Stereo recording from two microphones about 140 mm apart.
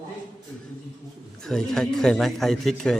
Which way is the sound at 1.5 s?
5° left (ahead or behind).